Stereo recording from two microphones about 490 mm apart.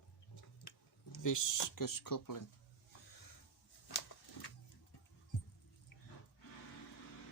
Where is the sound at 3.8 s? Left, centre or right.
Left.